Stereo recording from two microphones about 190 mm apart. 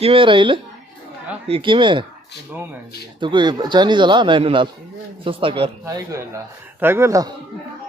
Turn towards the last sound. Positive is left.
turn(degrees=-15)  # may be behind; listen again after turning